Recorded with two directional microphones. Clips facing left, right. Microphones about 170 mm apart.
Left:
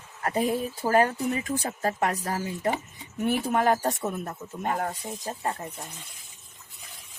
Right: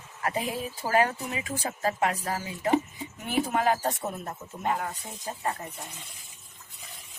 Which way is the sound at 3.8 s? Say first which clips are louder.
Left 2 dB; 45° left (ahead or behind).